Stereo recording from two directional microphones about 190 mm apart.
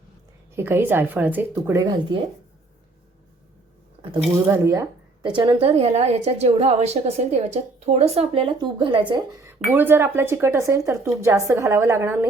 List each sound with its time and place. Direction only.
0.5 s speech: 10° right (ahead or behind)
4.4 s speech: 15° right (ahead or behind)
5.2 s a woman's voice: 25° right (ahead or behind)
9.4 s speech: 10° right (ahead or behind)